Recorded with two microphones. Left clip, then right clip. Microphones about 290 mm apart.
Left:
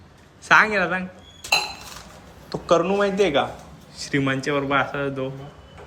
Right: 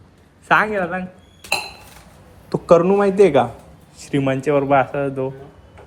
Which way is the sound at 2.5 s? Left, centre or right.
Centre.